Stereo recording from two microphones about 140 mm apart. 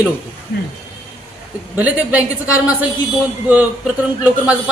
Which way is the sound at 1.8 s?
10° right (ahead or behind).